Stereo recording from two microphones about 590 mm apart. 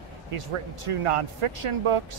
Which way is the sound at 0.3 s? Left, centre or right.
Right.